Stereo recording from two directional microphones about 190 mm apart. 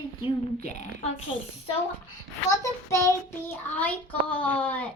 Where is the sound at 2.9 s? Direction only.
15° left (ahead or behind).